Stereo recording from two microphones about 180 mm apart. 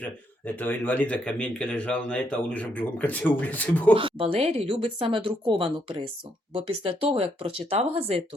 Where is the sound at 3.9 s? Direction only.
30° right (ahead or behind).